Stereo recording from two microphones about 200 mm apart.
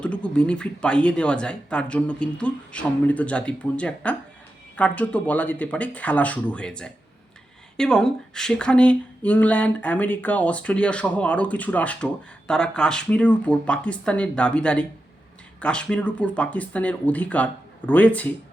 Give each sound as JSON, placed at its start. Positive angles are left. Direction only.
{"t": 0.0, "sound": "speech", "side_deg": 5}